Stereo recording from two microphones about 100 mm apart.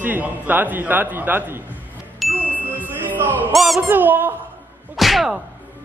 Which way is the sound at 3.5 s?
Centre (ahead or behind).